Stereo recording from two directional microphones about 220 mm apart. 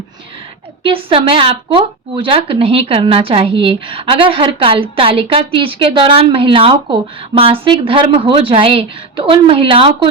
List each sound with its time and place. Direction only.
0.8 s speech: 25° right (ahead or behind)